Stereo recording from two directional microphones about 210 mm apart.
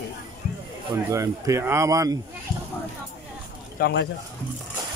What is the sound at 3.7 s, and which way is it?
Speech, 50° left (ahead or behind).